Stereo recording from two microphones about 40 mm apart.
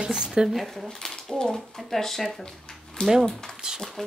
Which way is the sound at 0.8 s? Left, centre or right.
Centre.